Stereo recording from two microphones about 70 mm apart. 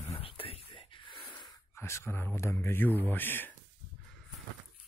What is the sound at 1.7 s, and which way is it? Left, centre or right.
Speech, left.